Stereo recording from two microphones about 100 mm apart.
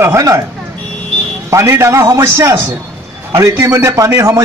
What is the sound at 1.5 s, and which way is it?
A man's voice, 30° right (ahead or behind).